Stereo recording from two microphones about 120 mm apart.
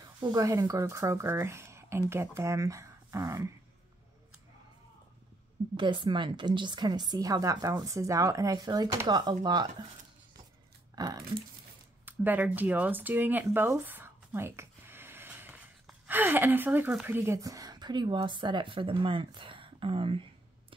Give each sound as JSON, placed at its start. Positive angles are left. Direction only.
{"t": 0.2, "sound": "speech", "side_deg": -30}
{"t": 5.8, "sound": "a woman's voice", "side_deg": -45}
{"t": 8.5, "sound": "a woman's voice", "side_deg": -40}
{"t": 11.0, "sound": "a woman's voice", "side_deg": -35}
{"t": 12.0, "sound": "a sound", "side_deg": -15}
{"t": 16.9, "sound": "a woman's voice", "side_deg": -15}